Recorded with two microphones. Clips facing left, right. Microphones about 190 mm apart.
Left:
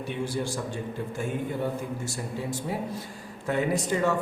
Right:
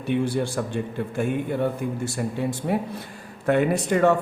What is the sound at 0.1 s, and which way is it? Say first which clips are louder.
A man's voice: right 8 dB; 60° right (ahead or behind).